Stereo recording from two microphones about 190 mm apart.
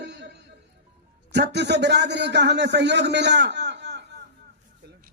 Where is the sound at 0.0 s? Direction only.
65° right (ahead or behind).